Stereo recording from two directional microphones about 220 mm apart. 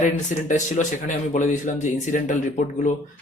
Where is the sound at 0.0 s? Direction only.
35° left (ahead or behind).